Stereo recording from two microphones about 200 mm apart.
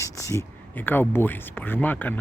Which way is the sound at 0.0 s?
15° left (ahead or behind).